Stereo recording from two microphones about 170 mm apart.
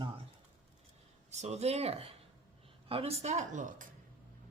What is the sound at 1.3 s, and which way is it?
Speech, 40° right (ahead or behind).